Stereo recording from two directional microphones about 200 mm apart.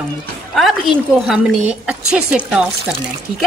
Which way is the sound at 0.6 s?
Centre (ahead or behind).